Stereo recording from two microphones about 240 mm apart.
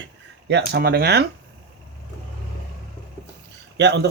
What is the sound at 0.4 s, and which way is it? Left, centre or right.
Speech, right.